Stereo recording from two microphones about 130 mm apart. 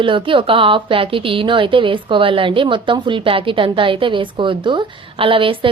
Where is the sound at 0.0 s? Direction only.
40° right (ahead or behind).